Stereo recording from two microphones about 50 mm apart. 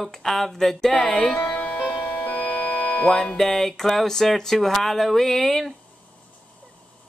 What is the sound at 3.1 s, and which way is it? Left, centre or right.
Speech, centre.